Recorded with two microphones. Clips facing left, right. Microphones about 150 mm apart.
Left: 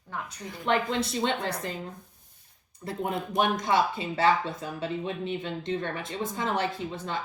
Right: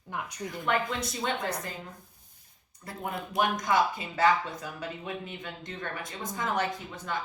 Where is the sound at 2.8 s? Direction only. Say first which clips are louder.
Left 5 dB; 25° left (ahead or behind).